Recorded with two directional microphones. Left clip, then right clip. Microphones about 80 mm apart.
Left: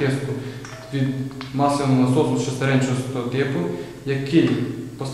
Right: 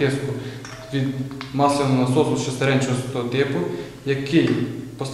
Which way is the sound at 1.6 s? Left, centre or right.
Centre.